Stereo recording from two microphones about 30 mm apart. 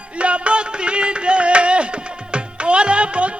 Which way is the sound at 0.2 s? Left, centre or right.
Right.